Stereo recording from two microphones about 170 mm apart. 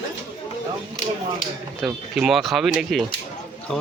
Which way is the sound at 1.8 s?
Centre (ahead or behind).